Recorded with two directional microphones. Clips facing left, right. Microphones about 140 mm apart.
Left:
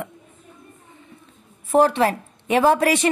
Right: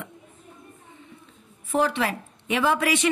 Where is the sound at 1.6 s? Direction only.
40° left (ahead or behind).